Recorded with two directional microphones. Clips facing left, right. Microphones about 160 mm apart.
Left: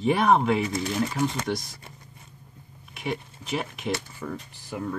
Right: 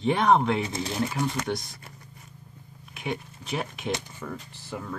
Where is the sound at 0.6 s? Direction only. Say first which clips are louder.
Left 3 dB; 25° right (ahead or behind).